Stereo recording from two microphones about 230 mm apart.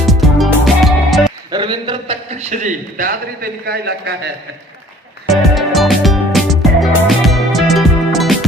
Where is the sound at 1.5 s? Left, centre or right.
Right.